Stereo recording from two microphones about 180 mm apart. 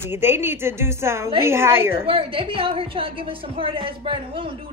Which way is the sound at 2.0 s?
30° right (ahead or behind).